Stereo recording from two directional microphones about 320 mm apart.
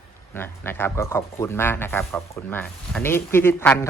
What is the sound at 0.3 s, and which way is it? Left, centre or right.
Speech, centre.